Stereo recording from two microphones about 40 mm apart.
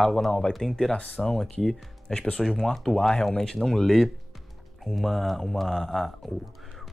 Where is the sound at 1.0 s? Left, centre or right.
Left.